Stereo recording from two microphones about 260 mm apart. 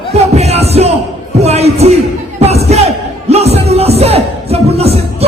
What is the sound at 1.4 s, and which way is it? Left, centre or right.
Speech, right.